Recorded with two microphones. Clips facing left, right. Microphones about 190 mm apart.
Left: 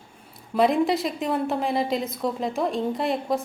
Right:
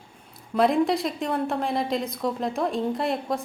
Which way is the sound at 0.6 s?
Centre (ahead or behind).